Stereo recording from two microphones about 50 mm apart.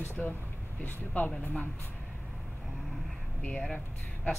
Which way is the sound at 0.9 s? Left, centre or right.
Left.